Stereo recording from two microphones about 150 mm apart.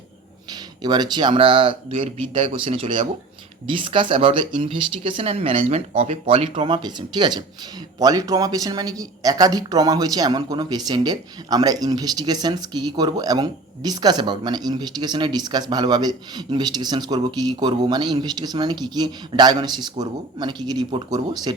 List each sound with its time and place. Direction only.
0.8 s speech: 30° right (ahead or behind)